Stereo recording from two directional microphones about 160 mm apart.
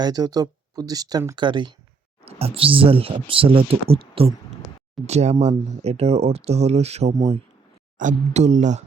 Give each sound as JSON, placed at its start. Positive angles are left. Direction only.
{"t": 0.0, "sound": "speech", "side_deg": -25}